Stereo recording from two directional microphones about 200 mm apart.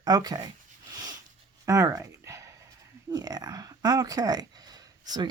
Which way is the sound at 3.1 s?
20° right (ahead or behind).